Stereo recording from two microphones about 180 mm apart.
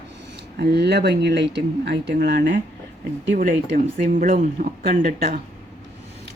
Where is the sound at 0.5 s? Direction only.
65° right (ahead or behind).